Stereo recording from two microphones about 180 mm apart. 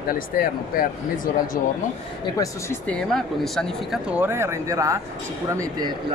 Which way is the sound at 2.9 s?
Centre (ahead or behind).